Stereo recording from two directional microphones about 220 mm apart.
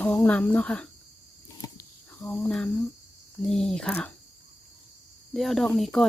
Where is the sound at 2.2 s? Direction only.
Centre (ahead or behind).